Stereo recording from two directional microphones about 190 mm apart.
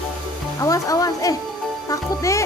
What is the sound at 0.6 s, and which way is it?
Music, 20° left (ahead or behind).